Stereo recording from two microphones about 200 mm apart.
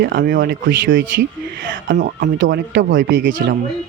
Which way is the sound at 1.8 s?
60° right (ahead or behind).